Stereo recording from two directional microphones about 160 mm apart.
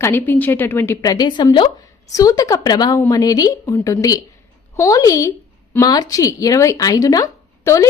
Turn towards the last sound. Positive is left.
turn(degrees=20)  # may be behind; listen again after turning